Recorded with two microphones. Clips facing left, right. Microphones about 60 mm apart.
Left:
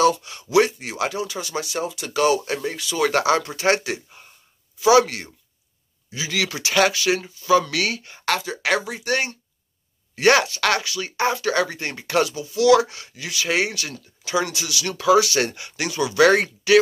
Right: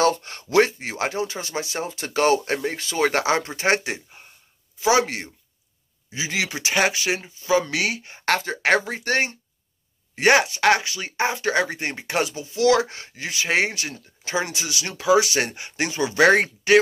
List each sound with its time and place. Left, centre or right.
0.0 s speech: right
8.3 s speech: right